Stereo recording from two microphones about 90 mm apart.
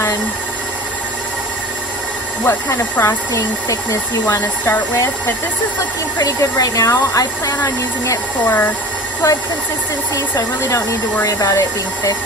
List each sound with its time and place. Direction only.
2.5 s speech: 35° left (ahead or behind)
6.1 s speech: 40° left (ahead or behind)